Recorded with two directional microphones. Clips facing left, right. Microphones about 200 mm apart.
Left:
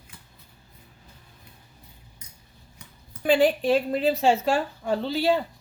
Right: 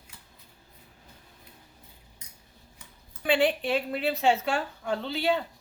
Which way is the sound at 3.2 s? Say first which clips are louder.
Left 5 dB; 40° left (ahead or behind).